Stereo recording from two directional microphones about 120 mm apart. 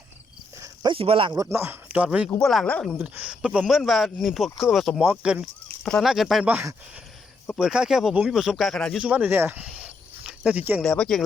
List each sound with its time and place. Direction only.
0.6 s cricket: 35° right (ahead or behind)
0.9 s speech: 50° right (ahead or behind)
1.3 s speech: 25° right (ahead or behind)
2.4 s speech: centre (ahead or behind)
3.0 s speech: 10° right (ahead or behind)
5.6 s speech: 5° left (ahead or behind)
7.6 s speech: 5° right (ahead or behind)
9.0 s speech: 10° right (ahead or behind)
10.8 s speech: 5° left (ahead or behind)